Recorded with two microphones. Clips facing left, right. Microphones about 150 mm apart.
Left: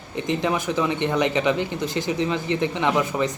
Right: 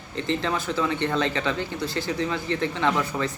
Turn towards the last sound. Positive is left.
turn(degrees=20)  # may be behind; listen again after turning